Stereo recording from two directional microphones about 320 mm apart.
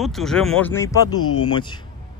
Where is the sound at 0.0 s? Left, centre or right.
Centre.